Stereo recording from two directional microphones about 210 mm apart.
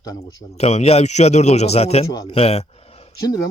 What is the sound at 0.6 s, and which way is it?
Speech, 30° left (ahead or behind).